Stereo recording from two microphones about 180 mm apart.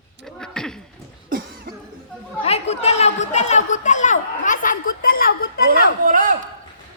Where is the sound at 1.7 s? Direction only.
55° right (ahead or behind).